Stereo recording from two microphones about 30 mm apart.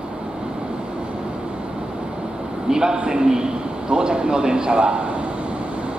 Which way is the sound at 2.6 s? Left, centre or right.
Right.